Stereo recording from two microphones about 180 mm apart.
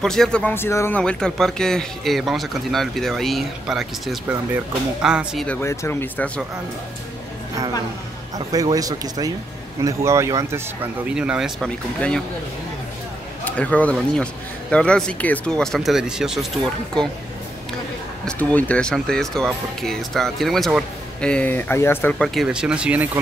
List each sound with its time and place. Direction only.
0.0 s speech: 5° left (ahead or behind)
5.6 s speech: 15° left (ahead or behind)
8.4 s speech: 20° right (ahead or behind); by 12.2 s 5° left (ahead or behind)
13.5 s speech: 10° left (ahead or behind)
18.2 s speech: 10° left (ahead or behind)
22.3 s speech: centre (ahead or behind)